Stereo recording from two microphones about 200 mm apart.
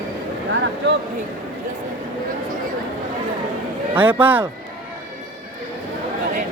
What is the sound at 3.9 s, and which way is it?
Speech, 10° right (ahead or behind).